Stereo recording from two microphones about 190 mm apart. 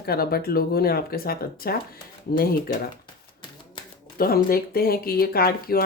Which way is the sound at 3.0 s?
25° left (ahead or behind).